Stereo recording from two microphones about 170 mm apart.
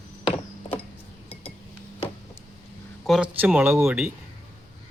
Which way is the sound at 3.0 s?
5° right (ahead or behind).